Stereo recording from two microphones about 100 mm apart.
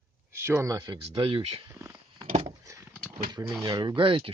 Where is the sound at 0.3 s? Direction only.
25° right (ahead or behind).